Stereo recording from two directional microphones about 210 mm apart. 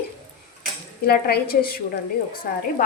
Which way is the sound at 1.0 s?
45° left (ahead or behind).